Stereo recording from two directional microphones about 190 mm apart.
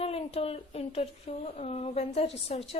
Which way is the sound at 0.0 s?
30° left (ahead or behind).